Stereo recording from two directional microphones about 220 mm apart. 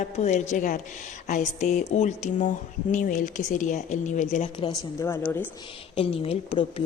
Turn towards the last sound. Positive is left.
turn(degrees=25)  # may be behind; listen again after turning